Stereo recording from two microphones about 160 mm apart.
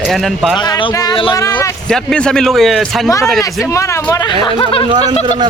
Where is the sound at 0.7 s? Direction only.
25° left (ahead or behind).